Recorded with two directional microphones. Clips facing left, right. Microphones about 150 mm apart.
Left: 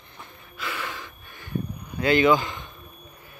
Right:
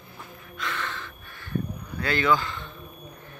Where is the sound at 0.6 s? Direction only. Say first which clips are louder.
Even; 10° left (ahead or behind).